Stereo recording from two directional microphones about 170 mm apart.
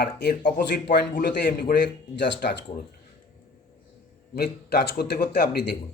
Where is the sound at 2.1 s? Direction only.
90° left.